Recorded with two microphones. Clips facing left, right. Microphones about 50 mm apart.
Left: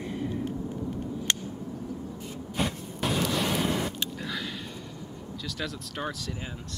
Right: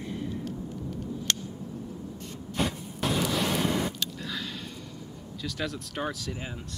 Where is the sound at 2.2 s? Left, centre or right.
Centre.